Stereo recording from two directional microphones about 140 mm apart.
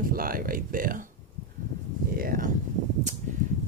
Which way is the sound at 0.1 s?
90° right.